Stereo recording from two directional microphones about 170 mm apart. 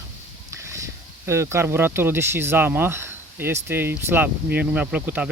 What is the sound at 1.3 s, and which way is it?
Speech, 15° right (ahead or behind).